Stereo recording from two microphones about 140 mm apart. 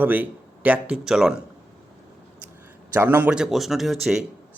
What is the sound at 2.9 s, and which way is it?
Speech, 15° right (ahead or behind).